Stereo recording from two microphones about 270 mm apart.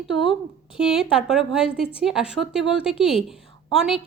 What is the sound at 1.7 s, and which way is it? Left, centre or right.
Speech, centre.